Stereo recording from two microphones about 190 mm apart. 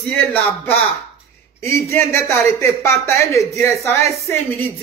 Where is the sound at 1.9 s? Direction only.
15° left (ahead or behind).